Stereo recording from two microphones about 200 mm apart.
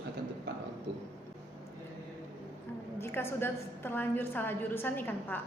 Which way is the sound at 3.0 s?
10° left (ahead or behind).